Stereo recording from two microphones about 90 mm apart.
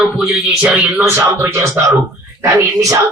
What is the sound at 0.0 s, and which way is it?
Speech, 10° right (ahead or behind).